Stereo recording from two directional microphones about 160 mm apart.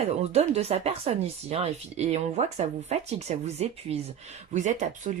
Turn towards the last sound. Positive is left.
turn(degrees=-50)  # may be behind; listen again after turning